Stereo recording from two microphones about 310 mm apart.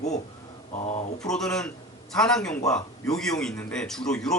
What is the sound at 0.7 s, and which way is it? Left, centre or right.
Speech, left.